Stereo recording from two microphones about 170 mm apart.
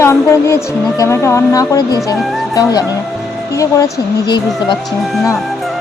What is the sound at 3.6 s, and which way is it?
Speech, 20° left (ahead or behind).